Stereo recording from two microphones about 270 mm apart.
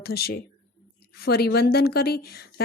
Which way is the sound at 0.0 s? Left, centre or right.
Left.